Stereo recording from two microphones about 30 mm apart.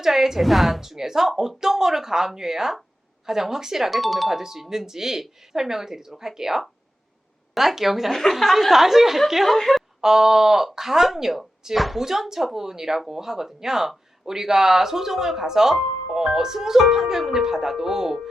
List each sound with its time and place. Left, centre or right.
0.0 s speech: centre
8.1 s a woman's voice: centre
8.4 s a woman's voice: centre
9.6 s a woman's voice: centre
10.0 s speech: centre